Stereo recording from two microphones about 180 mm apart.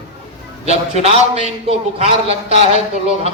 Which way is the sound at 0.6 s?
35° right (ahead or behind).